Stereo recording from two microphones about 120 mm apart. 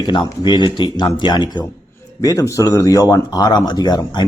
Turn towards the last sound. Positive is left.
turn(degrees=35)  # may be behind; listen again after turning